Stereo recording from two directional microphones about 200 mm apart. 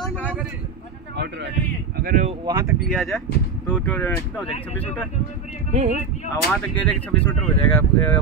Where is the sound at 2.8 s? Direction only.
Centre (ahead or behind).